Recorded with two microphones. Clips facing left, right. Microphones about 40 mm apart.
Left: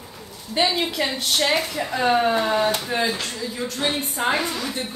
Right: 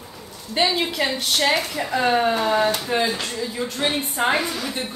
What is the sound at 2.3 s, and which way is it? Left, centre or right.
Speech, centre.